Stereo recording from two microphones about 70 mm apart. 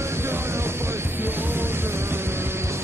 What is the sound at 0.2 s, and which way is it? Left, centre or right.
Music, right.